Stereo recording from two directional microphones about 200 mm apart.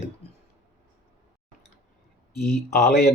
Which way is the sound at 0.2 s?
30° left (ahead or behind).